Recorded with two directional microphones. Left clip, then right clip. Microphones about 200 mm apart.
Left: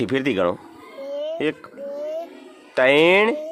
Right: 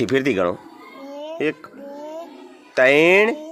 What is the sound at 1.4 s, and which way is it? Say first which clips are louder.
Speech: right 1 dB; centre (ahead or behind).